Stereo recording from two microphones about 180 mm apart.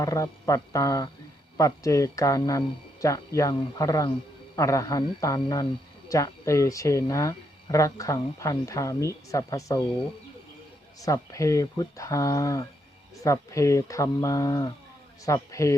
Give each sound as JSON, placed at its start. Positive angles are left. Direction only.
{"t": 0.0, "sound": "a man's voice", "side_deg": 15}
{"t": 11.0, "sound": "speech", "side_deg": 20}